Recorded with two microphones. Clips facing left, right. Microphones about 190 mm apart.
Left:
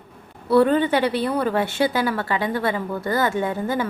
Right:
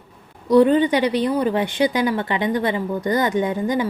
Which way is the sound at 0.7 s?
15° right (ahead or behind).